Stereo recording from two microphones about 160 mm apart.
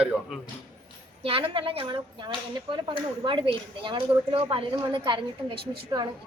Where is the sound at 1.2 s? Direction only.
35° right (ahead or behind).